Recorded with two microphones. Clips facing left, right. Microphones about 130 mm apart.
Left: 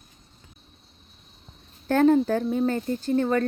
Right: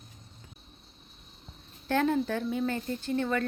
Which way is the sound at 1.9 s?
40° left (ahead or behind).